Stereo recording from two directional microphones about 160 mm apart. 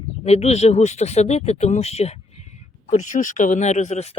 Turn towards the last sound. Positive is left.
turn(degrees=45)  # may be behind; listen again after turning